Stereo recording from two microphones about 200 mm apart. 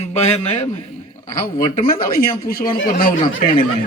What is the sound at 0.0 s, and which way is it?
Speech, 35° left (ahead or behind).